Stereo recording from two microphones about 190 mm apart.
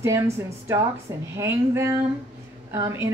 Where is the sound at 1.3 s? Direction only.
15° right (ahead or behind).